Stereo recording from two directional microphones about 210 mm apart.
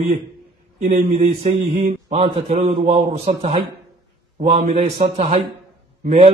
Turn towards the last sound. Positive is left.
turn(degrees=-30)  # may be behind; listen again after turning